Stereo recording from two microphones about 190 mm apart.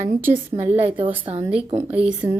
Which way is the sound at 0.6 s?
10° right (ahead or behind).